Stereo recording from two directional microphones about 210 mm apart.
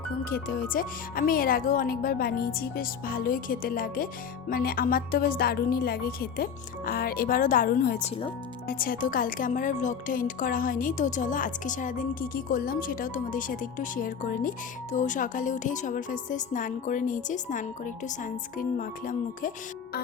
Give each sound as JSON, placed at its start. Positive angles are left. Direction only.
{"t": 0.3, "sound": "speech", "side_deg": 45}